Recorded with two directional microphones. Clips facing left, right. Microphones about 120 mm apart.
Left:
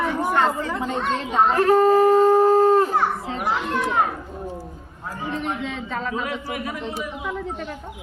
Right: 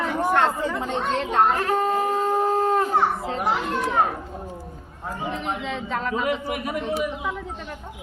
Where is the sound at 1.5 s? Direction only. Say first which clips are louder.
Left 6 dB; 35° left (ahead or behind).